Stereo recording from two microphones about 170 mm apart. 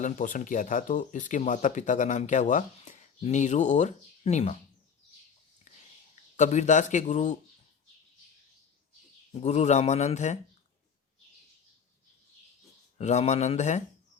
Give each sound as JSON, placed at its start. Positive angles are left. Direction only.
{"t": 0.0, "sound": "speech", "side_deg": 50}
{"t": 6.3, "sound": "speech", "side_deg": 45}
{"t": 9.3, "sound": "speech", "side_deg": 40}
{"t": 13.0, "sound": "speech", "side_deg": 40}